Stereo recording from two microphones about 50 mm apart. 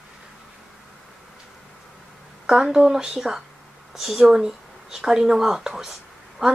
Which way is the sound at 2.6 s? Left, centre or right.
Centre.